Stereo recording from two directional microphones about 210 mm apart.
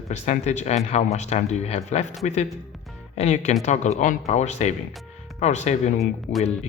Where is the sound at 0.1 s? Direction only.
35° left (ahead or behind).